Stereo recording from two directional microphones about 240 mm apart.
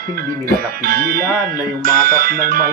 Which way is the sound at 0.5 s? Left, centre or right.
Right.